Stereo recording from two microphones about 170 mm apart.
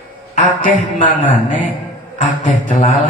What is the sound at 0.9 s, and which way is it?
A man's voice, 50° left (ahead or behind).